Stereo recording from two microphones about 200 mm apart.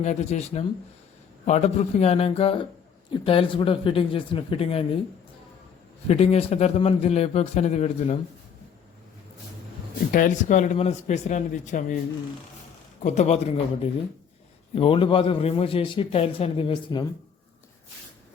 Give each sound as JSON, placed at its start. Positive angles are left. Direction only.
{"t": 0.0, "sound": "a man's voice", "side_deg": 35}
{"t": 6.1, "sound": "a man's voice", "side_deg": 30}
{"t": 10.1, "sound": "a man's voice", "side_deg": 40}
{"t": 13.0, "sound": "a man's voice", "side_deg": 35}
{"t": 14.8, "sound": "a man's voice", "side_deg": 25}